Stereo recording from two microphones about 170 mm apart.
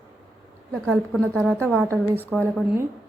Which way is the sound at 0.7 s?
Centre (ahead or behind).